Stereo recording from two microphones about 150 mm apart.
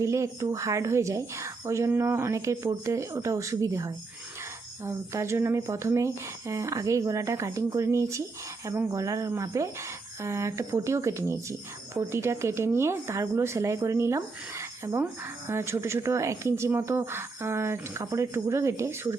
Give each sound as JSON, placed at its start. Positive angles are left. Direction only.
{"t": 0.0, "sound": "speech", "side_deg": -20}